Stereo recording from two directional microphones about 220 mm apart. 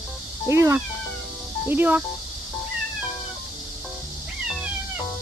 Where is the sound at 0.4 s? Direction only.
10° right (ahead or behind).